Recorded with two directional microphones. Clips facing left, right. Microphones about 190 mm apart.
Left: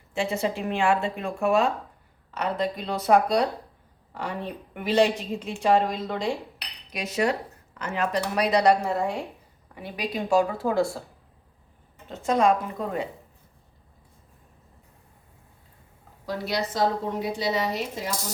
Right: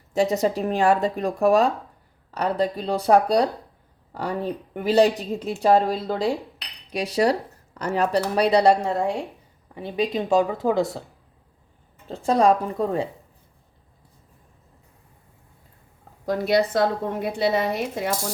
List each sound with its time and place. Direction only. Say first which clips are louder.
0.1 s a woman's voice: right 6 dB; 40° right (ahead or behind); by 11.0 s 20° right (ahead or behind)
12.0 s speech: right 3 dB; 30° right (ahead or behind)
16.2 s a woman's voice: right 8 dB; 50° right (ahead or behind)